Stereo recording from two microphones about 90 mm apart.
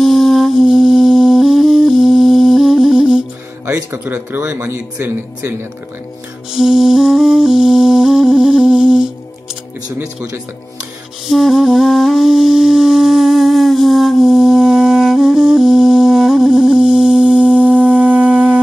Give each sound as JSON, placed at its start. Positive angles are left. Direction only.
{"t": 0.0, "sound": "music", "side_deg": 0}
{"t": 3.6, "sound": "speech", "side_deg": -20}
{"t": 6.5, "sound": "music", "side_deg": -5}
{"t": 11.2, "sound": "music", "side_deg": 0}